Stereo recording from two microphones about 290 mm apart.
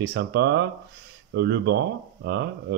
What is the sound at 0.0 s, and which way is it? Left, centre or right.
Speech, right.